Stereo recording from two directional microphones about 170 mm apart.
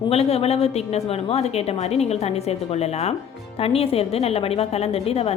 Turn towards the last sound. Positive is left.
turn(degrees=35)  # may be behind; listen again after turning